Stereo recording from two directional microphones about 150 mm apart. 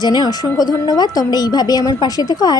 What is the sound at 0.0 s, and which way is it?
Speech, 30° left (ahead or behind).